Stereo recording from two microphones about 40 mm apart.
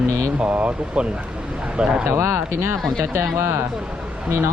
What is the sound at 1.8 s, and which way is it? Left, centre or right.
Speech, right.